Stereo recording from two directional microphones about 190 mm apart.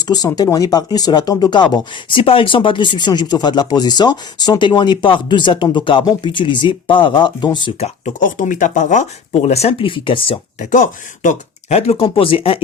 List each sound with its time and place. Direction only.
0.0 s speech: 20° left (ahead or behind)
7.8 s speech: 40° left (ahead or behind)
10.6 s speech: 40° left (ahead or behind)